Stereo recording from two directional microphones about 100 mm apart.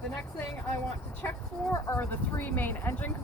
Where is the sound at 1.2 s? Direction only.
25° left (ahead or behind).